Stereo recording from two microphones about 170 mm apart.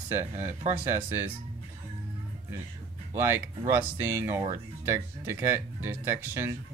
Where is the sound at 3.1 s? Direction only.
15° right (ahead or behind).